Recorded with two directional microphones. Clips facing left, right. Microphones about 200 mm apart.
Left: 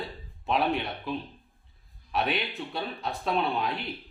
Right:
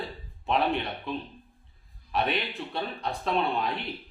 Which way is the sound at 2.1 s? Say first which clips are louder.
Even; centre (ahead or behind).